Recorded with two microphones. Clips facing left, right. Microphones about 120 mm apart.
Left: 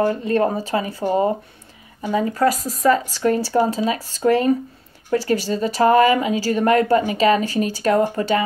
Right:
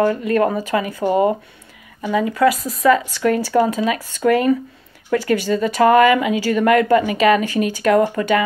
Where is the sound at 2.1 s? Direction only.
35° left (ahead or behind).